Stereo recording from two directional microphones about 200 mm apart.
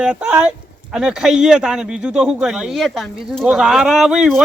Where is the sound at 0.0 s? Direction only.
5° right (ahead or behind).